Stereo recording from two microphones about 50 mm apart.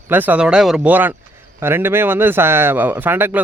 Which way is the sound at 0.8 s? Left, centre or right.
Right.